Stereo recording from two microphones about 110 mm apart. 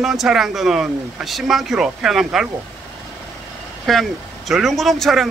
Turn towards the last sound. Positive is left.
turn(degrees=0)  # may be behind; listen again after turning